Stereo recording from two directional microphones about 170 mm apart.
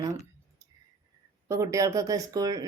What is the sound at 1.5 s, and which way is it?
A woman's voice, 20° right (ahead or behind).